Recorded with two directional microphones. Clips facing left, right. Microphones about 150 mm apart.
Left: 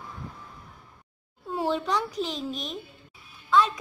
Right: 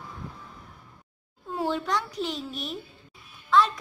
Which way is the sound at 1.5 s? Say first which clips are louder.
Left 1 dB; centre (ahead or behind).